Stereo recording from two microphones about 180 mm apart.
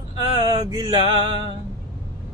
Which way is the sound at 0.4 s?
20° right (ahead or behind).